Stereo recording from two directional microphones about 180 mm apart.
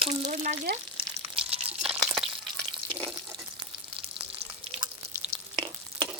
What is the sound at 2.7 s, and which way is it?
Water, 30° right (ahead or behind).